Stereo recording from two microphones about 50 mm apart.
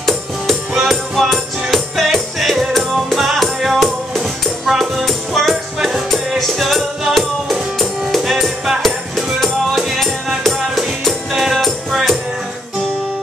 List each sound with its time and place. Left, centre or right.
0.7 s music: centre